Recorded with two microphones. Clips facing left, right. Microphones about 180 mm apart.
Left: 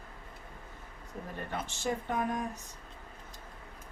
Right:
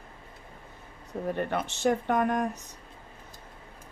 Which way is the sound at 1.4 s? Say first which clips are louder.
Right 8 dB; 70° right (ahead or behind).